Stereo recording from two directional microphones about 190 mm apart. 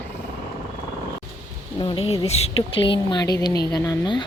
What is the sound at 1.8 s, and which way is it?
A woman's voice, 25° left (ahead or behind).